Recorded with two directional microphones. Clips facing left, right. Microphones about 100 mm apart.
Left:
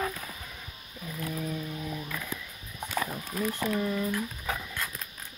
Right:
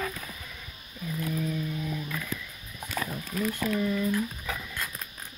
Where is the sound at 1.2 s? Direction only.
25° left (ahead or behind).